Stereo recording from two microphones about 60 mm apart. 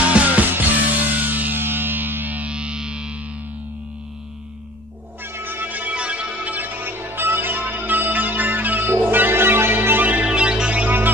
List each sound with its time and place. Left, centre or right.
0.0 s music: right
5.2 s music: right
10.2 s music: centre